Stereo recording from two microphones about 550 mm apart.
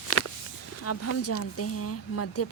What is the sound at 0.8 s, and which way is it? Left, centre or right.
Speech, left.